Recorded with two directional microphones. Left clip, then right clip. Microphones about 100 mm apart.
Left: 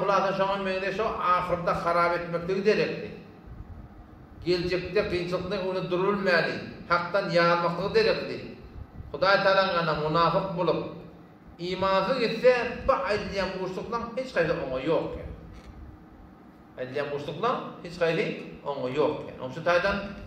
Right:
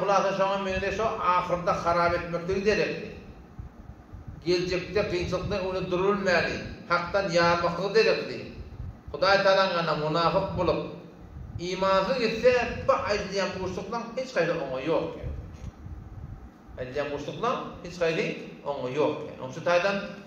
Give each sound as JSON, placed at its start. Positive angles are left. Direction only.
{"t": 0.0, "sound": "a man's voice", "side_deg": 5}
{"t": 4.5, "sound": "a man's voice", "side_deg": 5}
{"t": 16.7, "sound": "a man's voice", "side_deg": 10}